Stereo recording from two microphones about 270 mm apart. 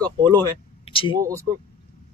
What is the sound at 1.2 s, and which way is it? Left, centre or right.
Speech, centre.